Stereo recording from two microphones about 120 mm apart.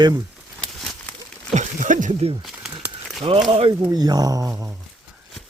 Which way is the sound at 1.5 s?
85° right.